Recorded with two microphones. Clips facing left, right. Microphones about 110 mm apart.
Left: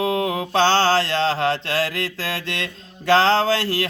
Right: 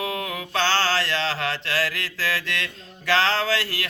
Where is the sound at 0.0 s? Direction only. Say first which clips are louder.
Left 7 dB; 30° left (ahead or behind).